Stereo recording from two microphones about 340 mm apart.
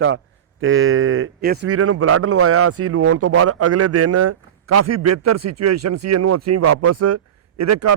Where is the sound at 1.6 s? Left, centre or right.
Right.